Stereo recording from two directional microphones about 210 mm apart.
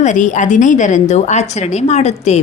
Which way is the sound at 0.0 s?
35° left (ahead or behind).